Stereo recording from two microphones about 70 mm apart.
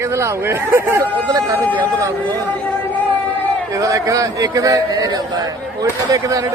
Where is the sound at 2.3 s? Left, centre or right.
Left.